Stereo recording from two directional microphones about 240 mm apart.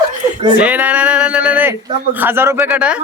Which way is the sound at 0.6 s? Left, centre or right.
Centre.